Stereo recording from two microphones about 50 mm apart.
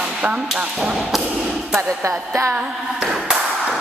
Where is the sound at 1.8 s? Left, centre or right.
Right.